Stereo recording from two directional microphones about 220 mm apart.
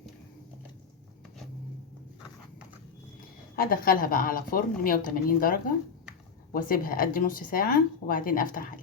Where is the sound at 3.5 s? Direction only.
40° left (ahead or behind).